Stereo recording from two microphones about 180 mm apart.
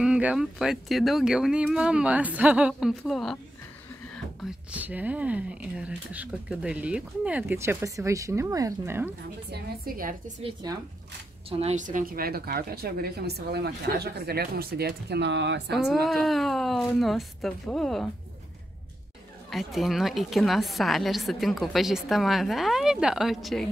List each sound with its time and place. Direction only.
0.0 s a woman's voice: 5° right (ahead or behind)
9.5 s a woman's voice: 55° right (ahead or behind)
10.6 s speech: 25° right (ahead or behind)
11.5 s a woman's voice: 40° right (ahead or behind); by 15.8 s 75° right (ahead or behind)
16.1 s a woman's voice: centre (ahead or behind)
19.5 s a woman's voice: centre (ahead or behind)